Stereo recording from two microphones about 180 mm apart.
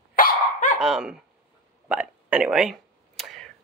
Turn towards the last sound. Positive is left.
turn(degrees=0)  # may be behind; listen again after turning